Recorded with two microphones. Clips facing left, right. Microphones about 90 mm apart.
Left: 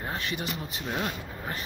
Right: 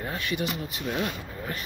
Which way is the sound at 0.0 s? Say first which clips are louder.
Right 3 dB; 30° left (ahead or behind).